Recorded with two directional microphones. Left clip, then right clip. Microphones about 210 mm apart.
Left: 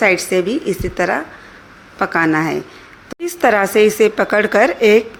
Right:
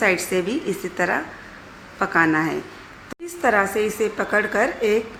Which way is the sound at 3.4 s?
35° left (ahead or behind).